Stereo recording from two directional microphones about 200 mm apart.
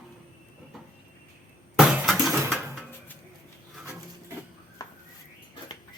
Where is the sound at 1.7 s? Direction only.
5° right (ahead or behind).